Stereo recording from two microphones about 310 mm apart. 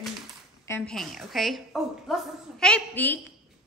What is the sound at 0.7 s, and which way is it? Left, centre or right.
A woman's voice, centre.